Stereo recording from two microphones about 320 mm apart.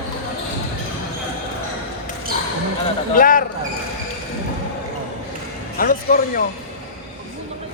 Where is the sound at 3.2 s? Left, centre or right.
Left.